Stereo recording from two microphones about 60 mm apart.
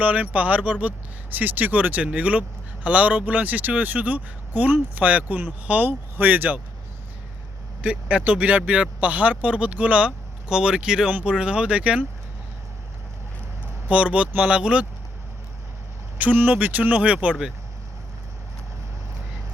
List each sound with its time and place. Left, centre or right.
0.0 s speech: right
7.8 s speech: right
13.8 s speech: right
16.1 s speech: right